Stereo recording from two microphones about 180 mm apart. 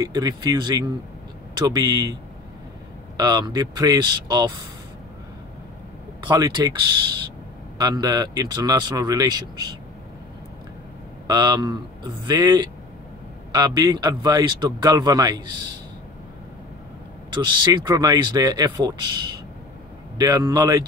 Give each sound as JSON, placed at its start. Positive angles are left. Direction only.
{"t": 0.0, "sound": "a man's voice", "side_deg": -20}
{"t": 3.2, "sound": "a man's voice", "side_deg": -20}
{"t": 6.2, "sound": "a man's voice", "side_deg": -25}
{"t": 11.2, "sound": "a man's voice", "side_deg": -20}
{"t": 17.3, "sound": "a man's voice", "side_deg": -25}
{"t": 20.2, "sound": "a man's voice", "side_deg": -20}